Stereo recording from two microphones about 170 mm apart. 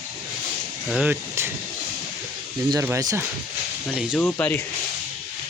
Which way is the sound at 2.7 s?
15° right (ahead or behind).